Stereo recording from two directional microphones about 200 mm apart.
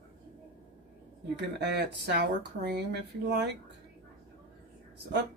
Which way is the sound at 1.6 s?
60° right (ahead or behind).